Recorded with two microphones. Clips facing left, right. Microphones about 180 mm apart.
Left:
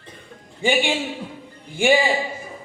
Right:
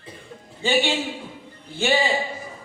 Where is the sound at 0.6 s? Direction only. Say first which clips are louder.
Left 1 dB; 15° left (ahead or behind).